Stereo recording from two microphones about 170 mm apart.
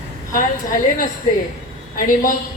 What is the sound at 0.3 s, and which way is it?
A woman's voice, 55° left (ahead or behind).